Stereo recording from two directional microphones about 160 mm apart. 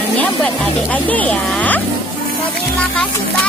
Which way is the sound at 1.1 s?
10° left (ahead or behind).